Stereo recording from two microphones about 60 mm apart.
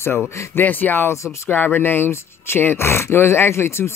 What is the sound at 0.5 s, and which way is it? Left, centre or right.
Speech, left.